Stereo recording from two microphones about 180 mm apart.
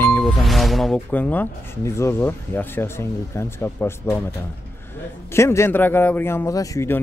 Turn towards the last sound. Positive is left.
turn(degrees=15)  # may be behind; listen again after turning